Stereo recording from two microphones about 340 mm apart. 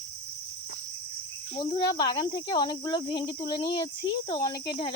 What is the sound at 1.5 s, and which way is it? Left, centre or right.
Speech, centre.